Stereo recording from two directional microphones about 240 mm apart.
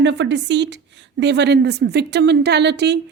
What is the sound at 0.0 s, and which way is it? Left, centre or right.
A woman's voice, right.